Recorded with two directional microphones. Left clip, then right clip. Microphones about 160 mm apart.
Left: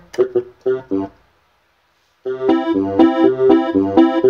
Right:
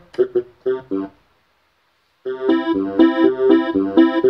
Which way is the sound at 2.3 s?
15° right (ahead or behind).